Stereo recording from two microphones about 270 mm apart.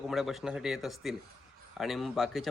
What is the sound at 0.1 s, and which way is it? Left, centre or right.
A man's voice, centre.